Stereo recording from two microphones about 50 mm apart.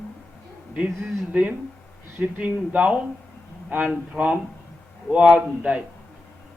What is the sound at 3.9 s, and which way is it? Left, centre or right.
A man's voice, right.